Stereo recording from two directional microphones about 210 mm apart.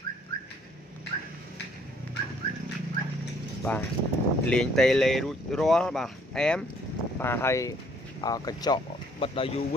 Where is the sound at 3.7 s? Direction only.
5° left (ahead or behind).